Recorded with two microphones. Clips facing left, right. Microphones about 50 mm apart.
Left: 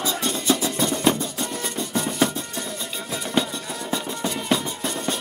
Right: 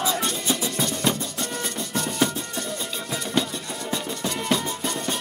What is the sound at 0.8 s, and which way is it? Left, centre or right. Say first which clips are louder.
Music: left 6 dB; centre.